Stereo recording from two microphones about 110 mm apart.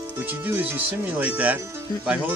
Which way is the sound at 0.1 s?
15° right (ahead or behind).